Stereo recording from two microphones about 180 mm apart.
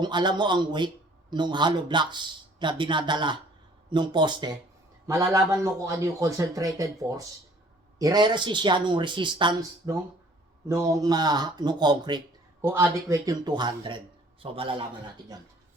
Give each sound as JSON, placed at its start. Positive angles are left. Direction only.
{"t": 0.0, "sound": "a man's voice", "side_deg": -25}